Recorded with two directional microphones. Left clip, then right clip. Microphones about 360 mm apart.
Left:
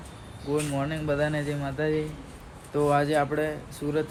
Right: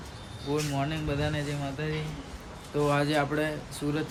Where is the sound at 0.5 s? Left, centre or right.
Centre.